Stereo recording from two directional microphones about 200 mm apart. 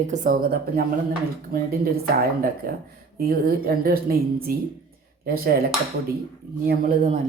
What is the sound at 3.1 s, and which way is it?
A woman's voice, 50° right (ahead or behind).